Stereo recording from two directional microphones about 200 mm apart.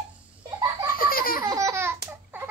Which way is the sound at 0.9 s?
45° left (ahead or behind).